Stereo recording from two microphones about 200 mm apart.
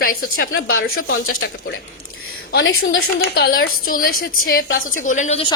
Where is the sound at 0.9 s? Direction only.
90° left; by 1.8 s 70° left (ahead or behind).